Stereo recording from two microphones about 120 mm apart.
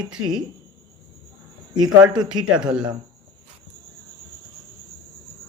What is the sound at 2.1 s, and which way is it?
Speech, 35° right (ahead or behind).